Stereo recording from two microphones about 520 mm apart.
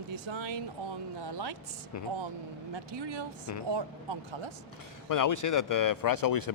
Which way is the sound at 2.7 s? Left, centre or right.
Right.